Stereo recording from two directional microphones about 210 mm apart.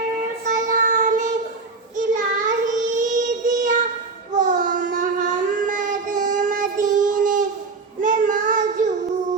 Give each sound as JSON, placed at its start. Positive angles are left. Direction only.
{"t": 0.4, "sound": "child singing", "side_deg": -35}